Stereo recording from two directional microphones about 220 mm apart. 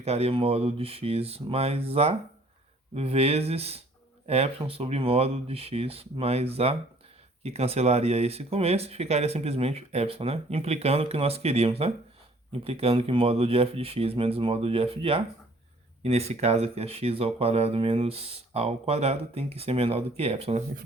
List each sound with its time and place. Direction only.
0.0 s speech: 30° right (ahead or behind)